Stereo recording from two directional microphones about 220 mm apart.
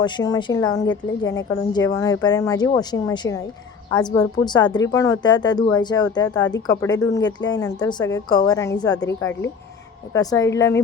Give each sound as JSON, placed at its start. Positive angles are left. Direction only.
{"t": 0.0, "sound": "a woman's voice", "side_deg": 20}